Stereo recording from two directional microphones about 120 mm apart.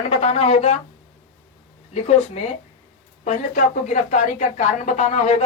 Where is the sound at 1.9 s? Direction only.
70° left (ahead or behind).